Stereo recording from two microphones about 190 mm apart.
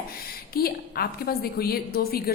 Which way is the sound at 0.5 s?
55° left (ahead or behind).